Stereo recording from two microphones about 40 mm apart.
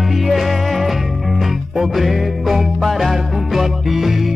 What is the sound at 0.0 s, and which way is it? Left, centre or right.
Music, centre.